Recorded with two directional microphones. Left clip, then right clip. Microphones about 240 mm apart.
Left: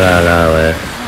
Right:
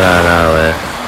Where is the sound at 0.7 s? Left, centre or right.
Right.